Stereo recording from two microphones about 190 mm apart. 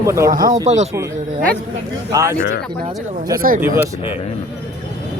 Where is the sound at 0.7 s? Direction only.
40° right (ahead or behind).